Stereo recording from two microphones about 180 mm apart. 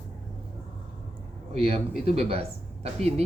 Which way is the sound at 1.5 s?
35° right (ahead or behind).